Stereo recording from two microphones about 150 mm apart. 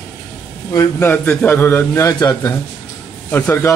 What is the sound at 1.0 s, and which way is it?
A man's voice, 15° left (ahead or behind).